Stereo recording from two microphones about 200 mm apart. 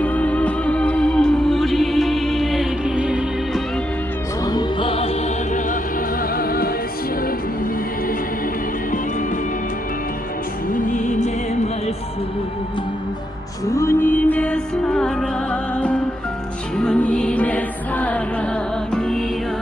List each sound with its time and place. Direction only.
0.0 s music: 5° left (ahead or behind)
4.5 s music: 20° left (ahead or behind)
6.3 s music: 50° left (ahead or behind)
10.7 s music: 40° left (ahead or behind)
13.7 s music: 15° left (ahead or behind)